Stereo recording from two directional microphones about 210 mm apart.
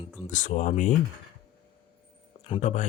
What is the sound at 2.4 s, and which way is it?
Speech, 30° left (ahead or behind).